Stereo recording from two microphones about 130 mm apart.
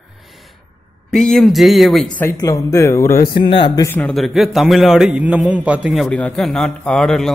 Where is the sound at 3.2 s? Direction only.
40° left (ahead or behind).